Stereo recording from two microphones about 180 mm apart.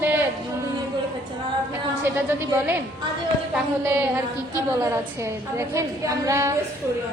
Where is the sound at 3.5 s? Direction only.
10° right (ahead or behind).